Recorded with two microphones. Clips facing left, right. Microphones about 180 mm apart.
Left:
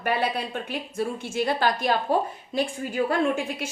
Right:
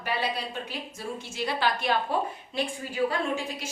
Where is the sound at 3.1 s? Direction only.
55° left (ahead or behind).